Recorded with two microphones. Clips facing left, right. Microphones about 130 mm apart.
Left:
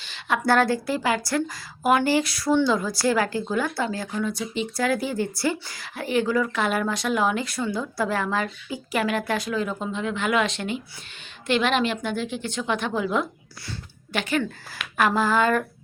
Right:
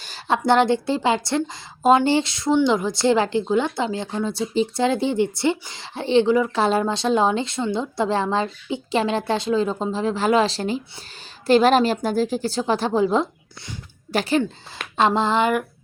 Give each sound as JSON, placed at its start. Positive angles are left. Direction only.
{"t": 0.3, "sound": "a woman's voice", "side_deg": -20}